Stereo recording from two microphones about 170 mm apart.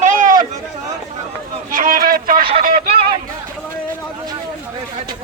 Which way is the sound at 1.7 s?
50° right (ahead or behind).